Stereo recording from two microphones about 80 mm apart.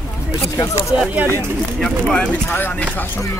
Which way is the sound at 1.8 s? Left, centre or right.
Centre.